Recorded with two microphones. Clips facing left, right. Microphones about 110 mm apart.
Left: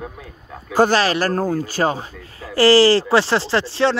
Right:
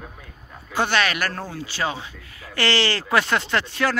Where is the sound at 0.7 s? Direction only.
40° left (ahead or behind).